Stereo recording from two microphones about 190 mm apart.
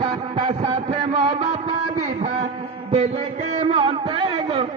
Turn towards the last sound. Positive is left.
turn(degrees=-30)  # may be behind; listen again after turning